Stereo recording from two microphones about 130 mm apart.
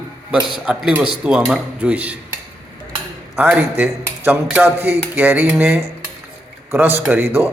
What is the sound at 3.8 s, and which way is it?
Speech, 15° right (ahead or behind).